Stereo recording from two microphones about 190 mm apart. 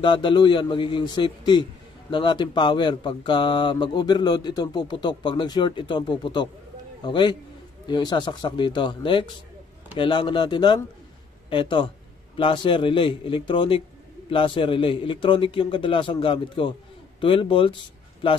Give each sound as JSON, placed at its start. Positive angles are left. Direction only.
{"t": 0.0, "sound": "a man's voice", "side_deg": 25}